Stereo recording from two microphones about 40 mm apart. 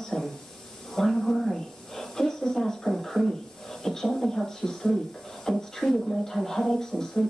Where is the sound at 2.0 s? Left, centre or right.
Centre.